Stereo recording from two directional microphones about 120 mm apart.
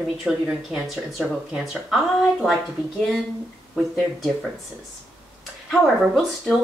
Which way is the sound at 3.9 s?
Centre (ahead or behind).